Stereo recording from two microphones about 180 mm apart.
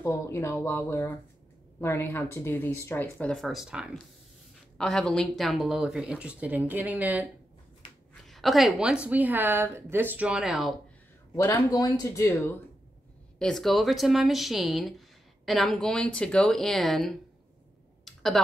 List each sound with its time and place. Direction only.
0.0 s speech: 15° left (ahead or behind); by 7.2 s 10° right (ahead or behind)
8.3 s a woman's voice: centre (ahead or behind)
11.3 s speech: 15° left (ahead or behind)
18.0 s a sound: centre (ahead or behind)